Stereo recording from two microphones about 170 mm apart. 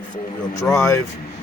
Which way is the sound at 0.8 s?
15° left (ahead or behind).